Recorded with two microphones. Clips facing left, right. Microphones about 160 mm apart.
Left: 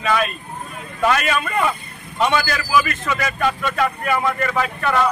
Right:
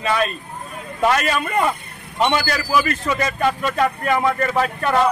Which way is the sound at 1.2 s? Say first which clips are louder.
Right 1 dB; 35° right (ahead or behind).